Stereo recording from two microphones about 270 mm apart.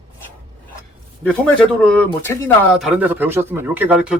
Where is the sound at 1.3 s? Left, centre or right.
Centre.